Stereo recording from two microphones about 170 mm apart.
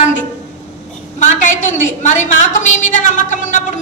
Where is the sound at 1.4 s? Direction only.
45° left (ahead or behind).